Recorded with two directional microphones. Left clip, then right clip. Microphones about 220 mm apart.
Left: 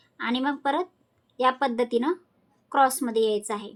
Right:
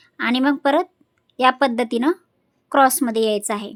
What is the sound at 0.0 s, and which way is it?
A woman's voice, 45° right (ahead or behind).